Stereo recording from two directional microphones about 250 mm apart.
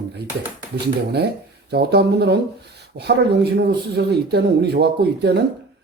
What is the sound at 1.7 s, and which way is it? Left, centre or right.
Speech, right.